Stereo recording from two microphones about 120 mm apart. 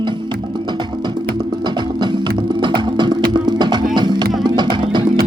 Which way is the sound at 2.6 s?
40° right (ahead or behind).